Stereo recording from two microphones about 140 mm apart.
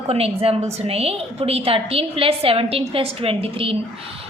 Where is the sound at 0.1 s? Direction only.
45° right (ahead or behind).